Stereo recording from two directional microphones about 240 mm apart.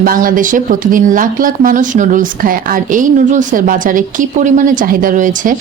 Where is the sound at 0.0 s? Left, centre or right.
Right.